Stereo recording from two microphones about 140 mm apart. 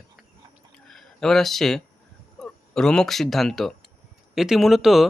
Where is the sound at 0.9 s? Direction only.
5° left (ahead or behind).